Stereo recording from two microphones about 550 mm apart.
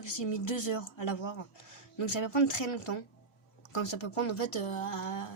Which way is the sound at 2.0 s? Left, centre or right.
Left.